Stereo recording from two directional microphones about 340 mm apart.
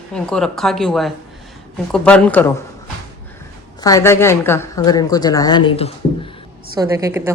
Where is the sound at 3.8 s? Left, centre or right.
Centre.